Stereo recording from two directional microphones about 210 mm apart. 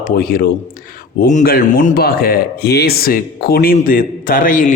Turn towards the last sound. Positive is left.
turn(degrees=40)  # may be behind; listen again after turning